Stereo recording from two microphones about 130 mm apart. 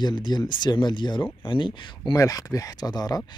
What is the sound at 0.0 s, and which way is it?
Speech, 35° left (ahead or behind).